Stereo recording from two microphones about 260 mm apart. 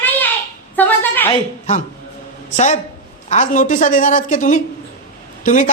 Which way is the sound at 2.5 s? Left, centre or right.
Left.